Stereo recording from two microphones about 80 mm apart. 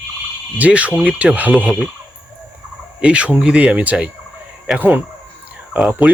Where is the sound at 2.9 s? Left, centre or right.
Centre.